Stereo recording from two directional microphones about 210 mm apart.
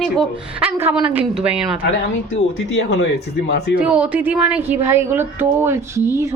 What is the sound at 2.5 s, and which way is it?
Speech, 70° left (ahead or behind).